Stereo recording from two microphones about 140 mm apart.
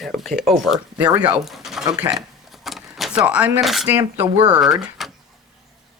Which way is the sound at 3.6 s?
Centre (ahead or behind).